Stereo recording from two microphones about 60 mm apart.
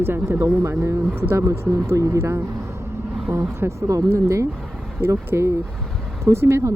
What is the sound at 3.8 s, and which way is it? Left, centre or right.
Speech, right.